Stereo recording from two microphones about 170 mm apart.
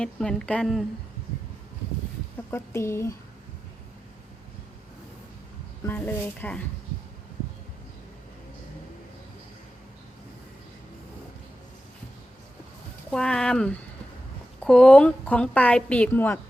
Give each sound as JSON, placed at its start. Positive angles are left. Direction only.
{"t": 0.0, "sound": "speech", "side_deg": 5}
{"t": 2.5, "sound": "a woman's voice", "side_deg": 15}
{"t": 5.8, "sound": "a woman's voice", "side_deg": 10}
{"t": 13.1, "sound": "a woman's voice", "side_deg": 5}